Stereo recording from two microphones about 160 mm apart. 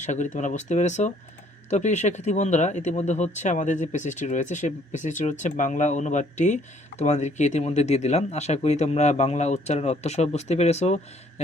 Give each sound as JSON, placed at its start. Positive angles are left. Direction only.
{"t": 0.0, "sound": "speech", "side_deg": 50}